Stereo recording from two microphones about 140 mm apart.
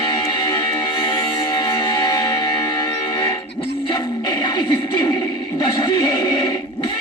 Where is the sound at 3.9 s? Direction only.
30° left (ahead or behind).